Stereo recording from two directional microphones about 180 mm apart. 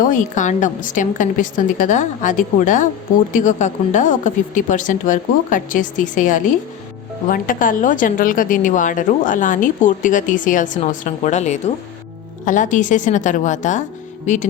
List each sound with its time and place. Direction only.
0.0 s a woman's voice: 45° left (ahead or behind)